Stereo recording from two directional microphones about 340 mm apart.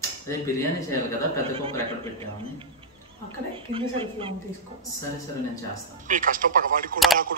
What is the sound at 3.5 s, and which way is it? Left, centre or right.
Speech, centre.